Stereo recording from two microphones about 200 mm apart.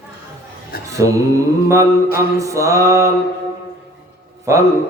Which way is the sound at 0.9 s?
15° right (ahead or behind).